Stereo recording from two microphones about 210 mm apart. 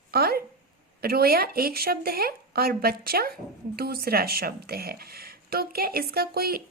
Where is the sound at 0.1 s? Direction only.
45° right (ahead or behind).